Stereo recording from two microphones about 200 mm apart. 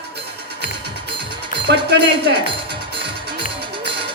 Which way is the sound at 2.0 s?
25° right (ahead or behind).